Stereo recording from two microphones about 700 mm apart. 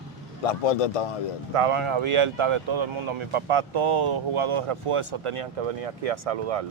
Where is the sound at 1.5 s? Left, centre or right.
Right.